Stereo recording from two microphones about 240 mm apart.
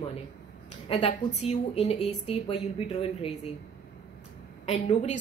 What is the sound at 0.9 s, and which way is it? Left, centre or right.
A woman's voice, left.